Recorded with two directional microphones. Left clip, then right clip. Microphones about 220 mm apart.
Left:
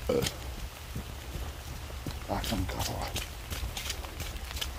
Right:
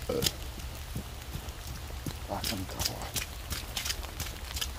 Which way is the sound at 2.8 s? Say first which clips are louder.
Right 1 dB; 40° right (ahead or behind).